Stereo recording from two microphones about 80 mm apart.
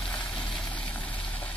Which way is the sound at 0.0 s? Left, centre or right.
Centre.